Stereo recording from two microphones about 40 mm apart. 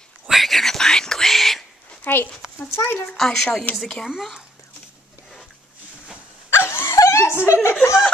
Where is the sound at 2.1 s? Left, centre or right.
Left.